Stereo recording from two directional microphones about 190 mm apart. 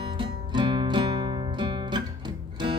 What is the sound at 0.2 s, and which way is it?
Music, 25° right (ahead or behind).